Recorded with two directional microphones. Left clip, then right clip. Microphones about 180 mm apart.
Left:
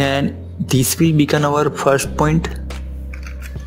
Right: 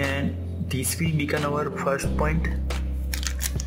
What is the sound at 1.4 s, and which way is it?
Speech, 30° left (ahead or behind).